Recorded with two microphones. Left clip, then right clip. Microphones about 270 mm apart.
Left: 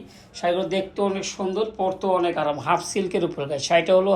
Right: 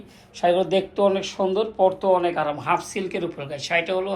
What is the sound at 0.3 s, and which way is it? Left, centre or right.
Speech, centre.